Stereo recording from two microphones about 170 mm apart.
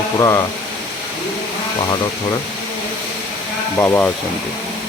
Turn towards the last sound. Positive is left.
turn(degrees=15)  # may be behind; listen again after turning